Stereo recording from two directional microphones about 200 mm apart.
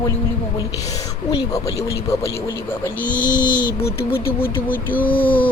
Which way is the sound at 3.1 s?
40° left (ahead or behind).